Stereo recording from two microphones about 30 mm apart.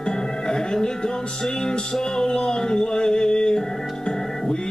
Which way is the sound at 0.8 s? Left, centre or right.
Left.